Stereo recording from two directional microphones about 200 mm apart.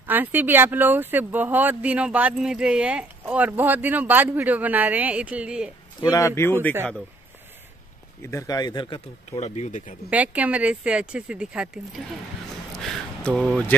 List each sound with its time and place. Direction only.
0.0 s speech: 10° right (ahead or behind)
5.9 s speech: 20° left (ahead or behind)
8.2 s speech: 15° left (ahead or behind)
9.4 s speech: 35° left (ahead or behind)
10.0 s speech: 5° right (ahead or behind)